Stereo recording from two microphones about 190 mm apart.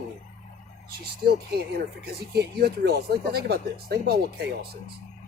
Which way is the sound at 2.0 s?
60° right (ahead or behind).